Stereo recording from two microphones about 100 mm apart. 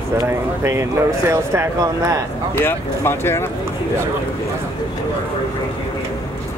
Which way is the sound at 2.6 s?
25° left (ahead or behind).